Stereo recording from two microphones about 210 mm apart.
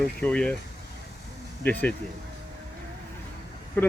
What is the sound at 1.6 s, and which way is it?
Speech, 5° left (ahead or behind).